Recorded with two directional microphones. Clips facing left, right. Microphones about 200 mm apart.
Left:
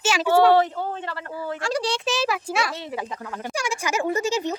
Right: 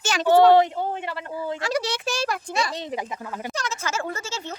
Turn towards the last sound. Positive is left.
turn(degrees=15)  # may be behind; listen again after turning